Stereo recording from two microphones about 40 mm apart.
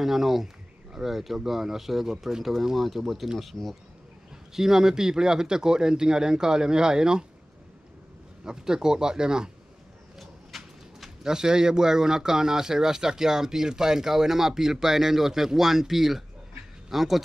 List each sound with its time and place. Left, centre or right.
0.0 s speech: centre
3.6 s speech: centre
4.6 s speech: centre
8.5 s speech: centre
10.1 s a sound: centre
11.2 s a man's voice: centre